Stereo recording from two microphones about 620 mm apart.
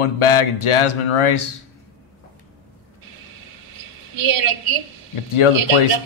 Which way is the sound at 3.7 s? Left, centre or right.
Right.